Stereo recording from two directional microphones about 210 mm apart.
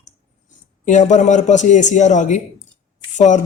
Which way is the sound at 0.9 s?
35° left (ahead or behind).